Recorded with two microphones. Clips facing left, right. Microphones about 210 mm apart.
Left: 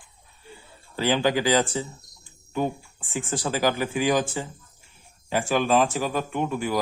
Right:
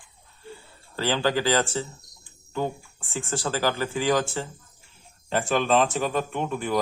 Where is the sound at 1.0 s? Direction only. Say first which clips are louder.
Left 2 dB; 15° left (ahead or behind).